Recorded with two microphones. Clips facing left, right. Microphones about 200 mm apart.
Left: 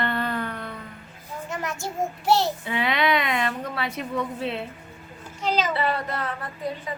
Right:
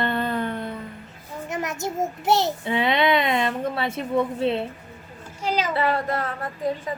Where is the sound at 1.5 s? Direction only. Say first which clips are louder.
Right 4 dB; 20° right (ahead or behind).